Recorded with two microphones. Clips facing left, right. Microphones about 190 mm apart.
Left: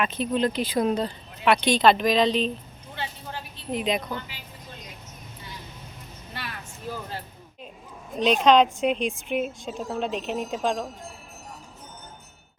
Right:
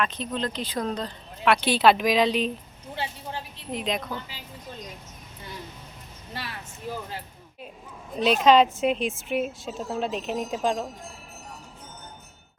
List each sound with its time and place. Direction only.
0.0 s speech: 10° left (ahead or behind)
1.6 s a woman's voice: 5° right (ahead or behind)
2.9 s vehicle: 30° right (ahead or behind)
3.7 s a woman's voice: centre (ahead or behind)
6.3 s vehicle: 30° right (ahead or behind)
8.2 s a woman's voice: 5° right (ahead or behind)